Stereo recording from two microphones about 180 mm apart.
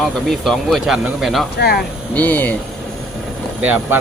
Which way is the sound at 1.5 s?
60° left (ahead or behind).